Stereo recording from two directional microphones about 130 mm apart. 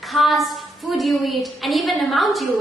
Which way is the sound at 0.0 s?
Centre (ahead or behind).